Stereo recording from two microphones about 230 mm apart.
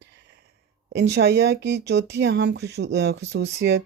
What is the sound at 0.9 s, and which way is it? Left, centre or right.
Speech, right.